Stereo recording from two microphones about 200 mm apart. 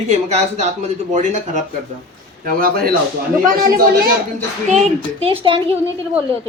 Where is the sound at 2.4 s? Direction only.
45° right (ahead or behind).